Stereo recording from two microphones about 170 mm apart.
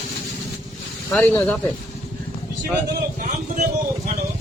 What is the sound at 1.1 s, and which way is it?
Speech, 5° left (ahead or behind).